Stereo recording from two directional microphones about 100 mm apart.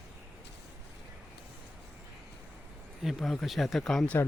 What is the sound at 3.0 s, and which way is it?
Speech, centre (ahead or behind).